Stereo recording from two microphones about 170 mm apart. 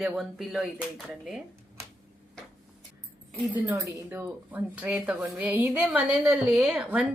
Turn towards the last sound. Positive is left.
turn(degrees=-5)  # may be behind; listen again after turning